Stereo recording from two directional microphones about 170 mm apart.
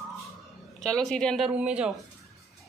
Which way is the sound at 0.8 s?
5° left (ahead or behind).